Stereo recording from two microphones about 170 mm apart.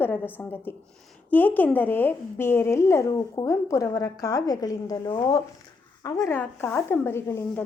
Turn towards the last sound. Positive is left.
turn(degrees=15)  # may be behind; listen again after turning